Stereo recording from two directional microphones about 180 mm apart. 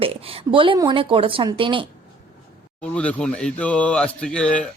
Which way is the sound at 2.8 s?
5° left (ahead or behind).